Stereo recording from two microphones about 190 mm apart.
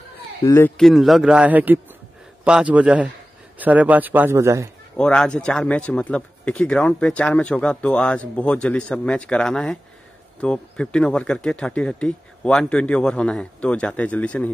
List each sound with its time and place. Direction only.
0.5 s a man's voice: 10° left (ahead or behind); by 4.6 s 15° right (ahead or behind)
4.9 s speech: 5° left (ahead or behind)